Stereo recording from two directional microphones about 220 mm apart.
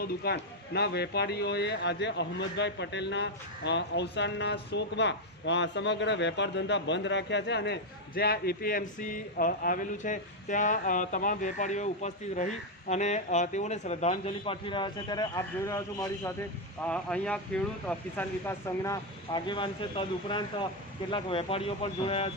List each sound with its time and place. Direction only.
0.0 s a man's voice: 45° left (ahead or behind); by 22.3 s 25° left (ahead or behind)